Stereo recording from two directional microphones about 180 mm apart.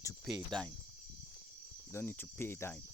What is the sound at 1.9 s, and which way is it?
Cricket, 10° left (ahead or behind).